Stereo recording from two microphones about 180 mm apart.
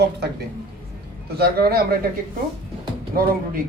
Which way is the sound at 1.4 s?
60° right (ahead or behind).